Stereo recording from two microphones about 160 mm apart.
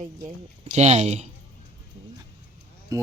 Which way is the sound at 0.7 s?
45° right (ahead or behind).